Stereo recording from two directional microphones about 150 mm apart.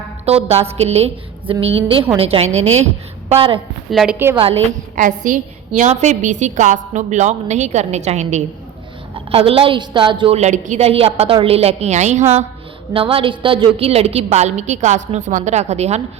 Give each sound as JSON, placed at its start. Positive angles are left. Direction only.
{"t": 0.3, "sound": "a woman's voice", "side_deg": -45}
{"t": 3.8, "sound": "a woman's voice", "side_deg": 0}
{"t": 4.4, "sound": "a woman's voice", "side_deg": -40}
{"t": 4.9, "sound": "a woman's voice", "side_deg": -60}
{"t": 9.1, "sound": "a woman's voice", "side_deg": -40}
{"t": 10.3, "sound": "a woman's voice", "side_deg": -50}
{"t": 12.9, "sound": "a woman's voice", "side_deg": -40}